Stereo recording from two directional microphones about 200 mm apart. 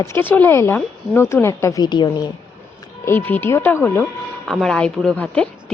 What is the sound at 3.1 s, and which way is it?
Speech, 10° left (ahead or behind).